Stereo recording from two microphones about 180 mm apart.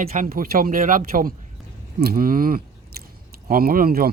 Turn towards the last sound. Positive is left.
turn(degrees=-55)  # may be behind; listen again after turning